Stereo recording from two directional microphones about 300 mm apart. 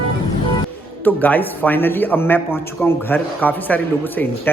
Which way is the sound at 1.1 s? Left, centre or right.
Centre.